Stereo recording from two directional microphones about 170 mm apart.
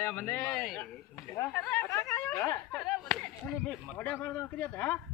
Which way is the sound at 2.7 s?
5° left (ahead or behind).